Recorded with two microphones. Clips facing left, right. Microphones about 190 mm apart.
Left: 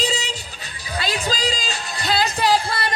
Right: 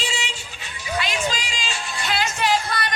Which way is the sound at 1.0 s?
35° left (ahead or behind).